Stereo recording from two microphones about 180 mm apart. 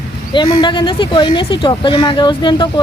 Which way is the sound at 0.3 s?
25° left (ahead or behind).